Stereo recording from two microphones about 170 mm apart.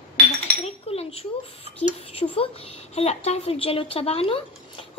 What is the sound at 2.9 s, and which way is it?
Speech, 40° left (ahead or behind).